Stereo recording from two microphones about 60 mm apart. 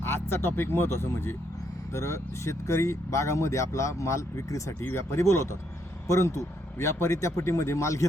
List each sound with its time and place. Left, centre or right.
0.0 s speech: left
1.9 s speech: left